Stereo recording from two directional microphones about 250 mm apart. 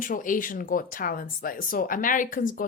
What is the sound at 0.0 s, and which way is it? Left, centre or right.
Speech, left.